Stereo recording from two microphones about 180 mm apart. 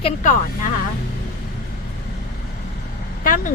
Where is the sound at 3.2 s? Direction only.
50° left (ahead or behind).